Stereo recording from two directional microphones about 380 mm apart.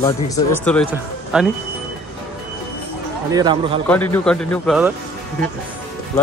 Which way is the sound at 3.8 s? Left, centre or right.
Centre.